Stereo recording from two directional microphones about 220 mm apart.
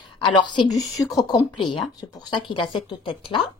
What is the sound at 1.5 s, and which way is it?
Speech, 90° left.